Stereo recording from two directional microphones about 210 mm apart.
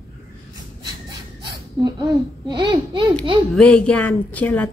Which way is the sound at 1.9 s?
20° right (ahead or behind).